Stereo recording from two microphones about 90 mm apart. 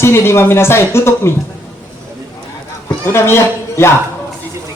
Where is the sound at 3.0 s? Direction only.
30° left (ahead or behind).